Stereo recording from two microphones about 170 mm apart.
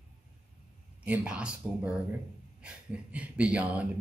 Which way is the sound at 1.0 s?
5° right (ahead or behind).